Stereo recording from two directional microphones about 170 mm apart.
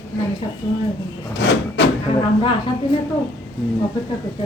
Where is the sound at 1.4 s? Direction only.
90° left.